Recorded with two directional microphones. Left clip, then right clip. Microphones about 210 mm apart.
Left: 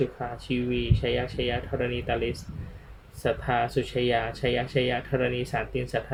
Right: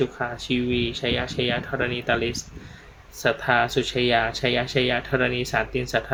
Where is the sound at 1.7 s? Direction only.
45° right (ahead or behind).